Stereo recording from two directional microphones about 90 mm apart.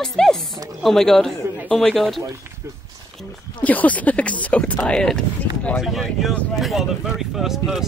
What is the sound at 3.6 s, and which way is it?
Speech, 15° left (ahead or behind).